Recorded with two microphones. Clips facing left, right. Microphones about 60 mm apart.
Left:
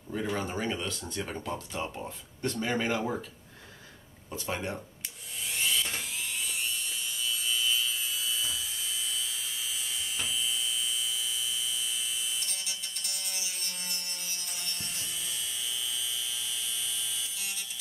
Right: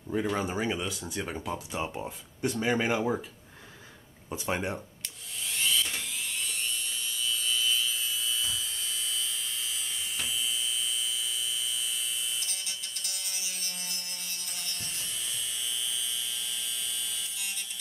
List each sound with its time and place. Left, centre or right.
0.4 s speech: centre
4.3 s speech: centre
5.5 s dental drill: centre